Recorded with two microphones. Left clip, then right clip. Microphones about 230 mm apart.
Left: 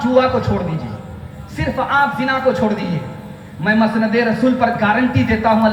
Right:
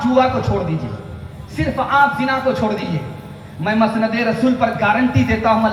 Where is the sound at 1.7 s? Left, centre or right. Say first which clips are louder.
Right 1 dB; left.